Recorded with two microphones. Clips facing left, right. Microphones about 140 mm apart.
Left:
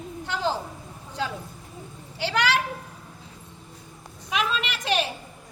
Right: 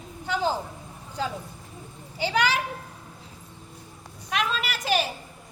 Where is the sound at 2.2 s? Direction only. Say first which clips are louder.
Even; 80° left.